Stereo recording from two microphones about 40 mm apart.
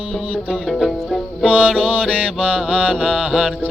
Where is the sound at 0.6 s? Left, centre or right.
Centre.